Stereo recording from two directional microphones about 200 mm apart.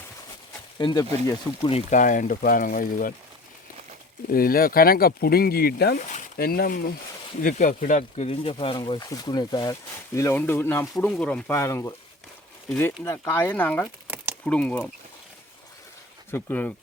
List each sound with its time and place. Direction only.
0.8 s speech: 25° left (ahead or behind)
1.9 s speech: 40° left (ahead or behind)
4.3 s speech: 45° left (ahead or behind); by 13.8 s 10° left (ahead or behind)
13.8 s a sound: 10° right (ahead or behind)
14.4 s speech: 5° left (ahead or behind)
16.3 s speech: 10° left (ahead or behind)